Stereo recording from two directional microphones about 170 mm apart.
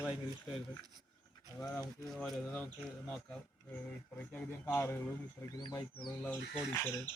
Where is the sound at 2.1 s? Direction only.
Centre (ahead or behind).